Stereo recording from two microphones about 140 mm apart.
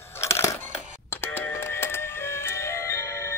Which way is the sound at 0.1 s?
20° left (ahead or behind).